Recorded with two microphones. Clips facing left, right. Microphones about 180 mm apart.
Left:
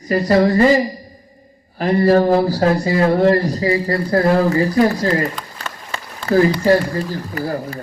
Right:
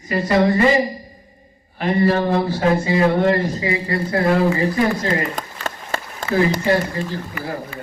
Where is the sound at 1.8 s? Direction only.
40° left (ahead or behind).